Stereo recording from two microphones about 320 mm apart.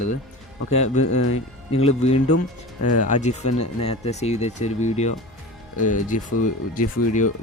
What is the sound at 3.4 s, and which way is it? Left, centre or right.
Speech, left.